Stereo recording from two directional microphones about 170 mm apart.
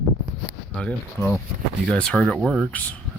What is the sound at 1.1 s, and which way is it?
Speech, 15° left (ahead or behind).